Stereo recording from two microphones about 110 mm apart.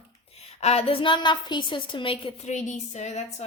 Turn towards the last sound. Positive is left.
turn(degrees=90)